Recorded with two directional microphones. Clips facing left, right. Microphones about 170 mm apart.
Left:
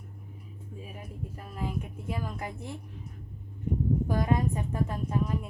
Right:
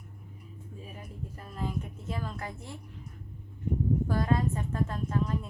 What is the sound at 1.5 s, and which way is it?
A woman's voice, 10° left (ahead or behind).